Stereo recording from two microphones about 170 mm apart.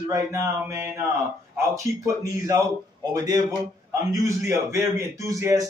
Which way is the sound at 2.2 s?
20° right (ahead or behind).